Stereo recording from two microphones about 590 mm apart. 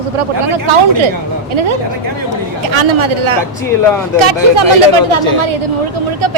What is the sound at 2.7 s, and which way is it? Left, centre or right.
Speech, right.